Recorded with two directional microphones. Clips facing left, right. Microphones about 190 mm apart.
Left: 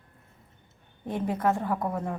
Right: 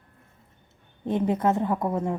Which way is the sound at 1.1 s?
20° right (ahead or behind).